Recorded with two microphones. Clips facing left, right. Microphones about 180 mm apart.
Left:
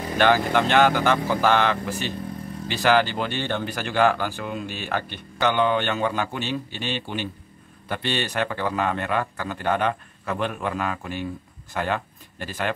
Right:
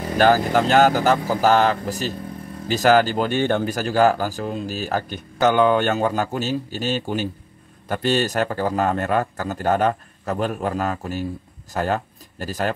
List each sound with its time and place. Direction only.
0.2 s speech: 40° right (ahead or behind)